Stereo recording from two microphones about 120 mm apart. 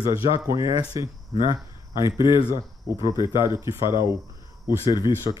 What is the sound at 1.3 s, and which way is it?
Cricket, 45° left (ahead or behind).